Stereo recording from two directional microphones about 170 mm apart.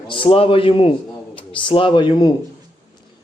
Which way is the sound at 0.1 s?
30° left (ahead or behind).